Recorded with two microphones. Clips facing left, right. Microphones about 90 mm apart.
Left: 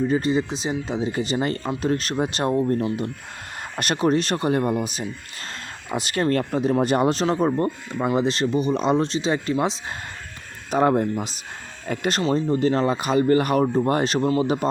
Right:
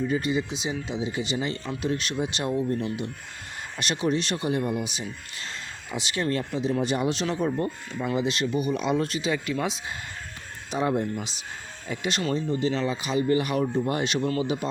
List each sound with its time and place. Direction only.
0.0 s speech: 35° left (ahead or behind)
10.7 s speech: 50° left (ahead or behind)
11.0 s speech: 35° left (ahead or behind)